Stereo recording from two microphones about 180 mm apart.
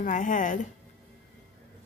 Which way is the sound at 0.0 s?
45° left (ahead or behind).